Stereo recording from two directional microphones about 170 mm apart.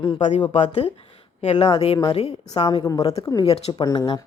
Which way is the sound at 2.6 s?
20° left (ahead or behind).